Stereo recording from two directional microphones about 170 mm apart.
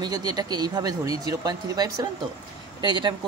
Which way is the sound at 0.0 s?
25° right (ahead or behind).